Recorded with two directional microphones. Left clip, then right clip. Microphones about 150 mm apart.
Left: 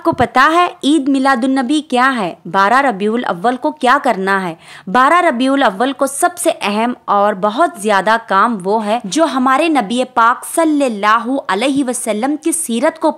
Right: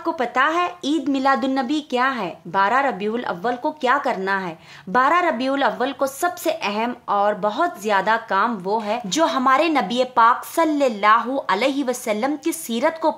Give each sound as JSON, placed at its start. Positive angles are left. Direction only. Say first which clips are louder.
{"t": 0.0, "sound": "a woman's voice", "louder": "left 9 dB", "side_deg": 50}
{"t": 1.1, "sound": "a woman's voice", "louder": "left 6 dB", "side_deg": 40}